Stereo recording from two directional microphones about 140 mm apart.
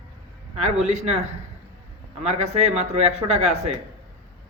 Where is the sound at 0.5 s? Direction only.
55° right (ahead or behind).